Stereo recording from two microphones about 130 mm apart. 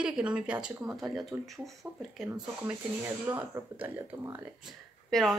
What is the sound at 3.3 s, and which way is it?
Speech, 15° right (ahead or behind).